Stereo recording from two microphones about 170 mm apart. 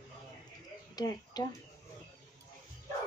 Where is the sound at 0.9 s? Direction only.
25° left (ahead or behind).